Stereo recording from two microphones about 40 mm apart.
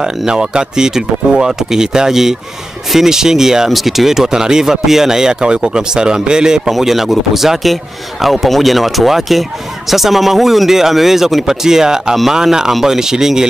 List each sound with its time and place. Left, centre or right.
0.0 s speech: centre
6.7 s a man's voice: centre